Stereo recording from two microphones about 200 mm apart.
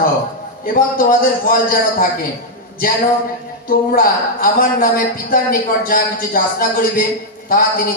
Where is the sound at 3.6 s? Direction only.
45° left (ahead or behind).